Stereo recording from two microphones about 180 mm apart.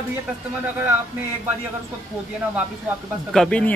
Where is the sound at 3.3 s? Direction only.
5° left (ahead or behind).